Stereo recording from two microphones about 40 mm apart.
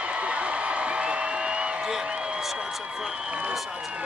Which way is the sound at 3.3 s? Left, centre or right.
Right.